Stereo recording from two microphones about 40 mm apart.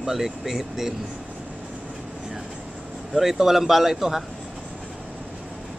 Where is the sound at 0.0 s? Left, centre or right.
Centre.